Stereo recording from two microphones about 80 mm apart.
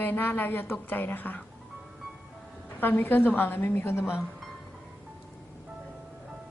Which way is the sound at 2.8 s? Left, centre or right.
Left.